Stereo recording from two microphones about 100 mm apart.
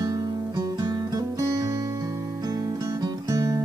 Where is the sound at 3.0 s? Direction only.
35° right (ahead or behind).